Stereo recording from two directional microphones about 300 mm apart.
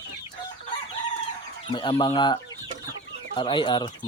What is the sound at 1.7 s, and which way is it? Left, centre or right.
Speech, centre.